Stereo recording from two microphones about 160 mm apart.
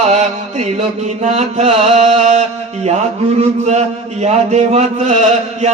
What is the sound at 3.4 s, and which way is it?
Chant, 45° right (ahead or behind).